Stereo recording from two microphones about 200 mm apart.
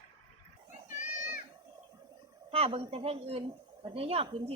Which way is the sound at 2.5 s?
30° right (ahead or behind).